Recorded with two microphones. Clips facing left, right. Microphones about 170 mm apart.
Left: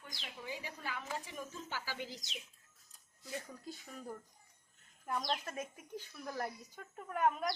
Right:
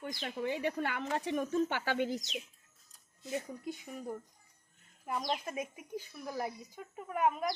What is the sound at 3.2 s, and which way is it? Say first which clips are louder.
A woman's voice: right 7 dB; 20° right (ahead or behind).